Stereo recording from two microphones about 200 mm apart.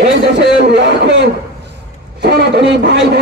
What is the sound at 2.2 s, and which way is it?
Speech, 55° right (ahead or behind).